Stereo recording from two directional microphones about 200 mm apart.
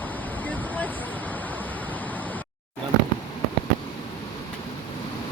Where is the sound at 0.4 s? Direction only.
10° left (ahead or behind).